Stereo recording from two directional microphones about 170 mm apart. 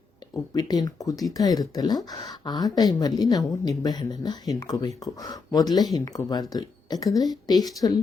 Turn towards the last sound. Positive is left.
turn(degrees=25)  # may be behind; listen again after turning